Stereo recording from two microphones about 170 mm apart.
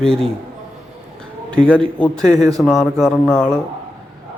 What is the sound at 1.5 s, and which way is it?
A man's voice, 5° left (ahead or behind).